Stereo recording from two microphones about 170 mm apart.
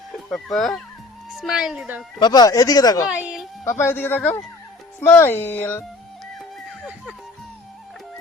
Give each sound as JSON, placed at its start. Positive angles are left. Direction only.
{"t": 0.3, "sound": "a woman's voice", "side_deg": 5}
{"t": 2.1, "sound": "speech", "side_deg": 25}
{"t": 3.1, "sound": "speech", "side_deg": -5}
{"t": 3.6, "sound": "speech", "side_deg": 15}
{"t": 6.8, "sound": "speech", "side_deg": -5}